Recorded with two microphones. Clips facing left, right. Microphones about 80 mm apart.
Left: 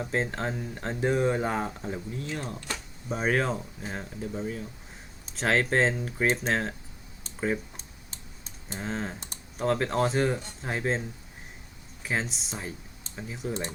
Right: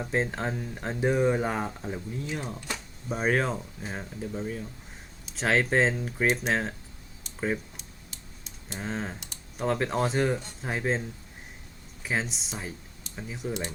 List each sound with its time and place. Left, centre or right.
0.0 s speech: centre
7.8 s typing: left
8.8 s speech: centre
12.0 s speech: centre